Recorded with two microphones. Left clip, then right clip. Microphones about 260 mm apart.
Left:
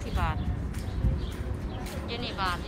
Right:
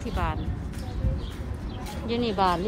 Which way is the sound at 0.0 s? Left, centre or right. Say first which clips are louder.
Right 2 dB; centre.